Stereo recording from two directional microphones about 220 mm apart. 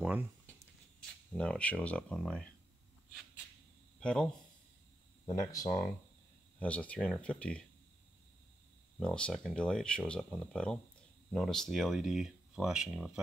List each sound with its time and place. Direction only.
0.0 s a sound: 10° right (ahead or behind)
1.3 s speech: 5° left (ahead or behind)
4.0 s speech: 5° left (ahead or behind)
5.3 s speech: 15° left (ahead or behind)
9.0 s speech: 5° left (ahead or behind)